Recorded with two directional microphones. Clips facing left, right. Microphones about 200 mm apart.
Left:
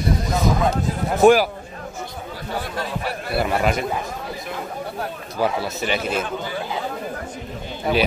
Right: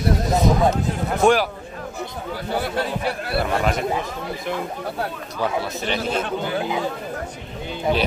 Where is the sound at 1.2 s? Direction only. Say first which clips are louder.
Left 4 dB; 5° left (ahead or behind).